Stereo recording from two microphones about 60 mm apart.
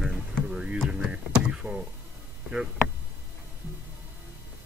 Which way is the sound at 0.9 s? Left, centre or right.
Centre.